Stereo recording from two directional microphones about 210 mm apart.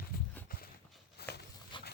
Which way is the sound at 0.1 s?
45° left (ahead or behind).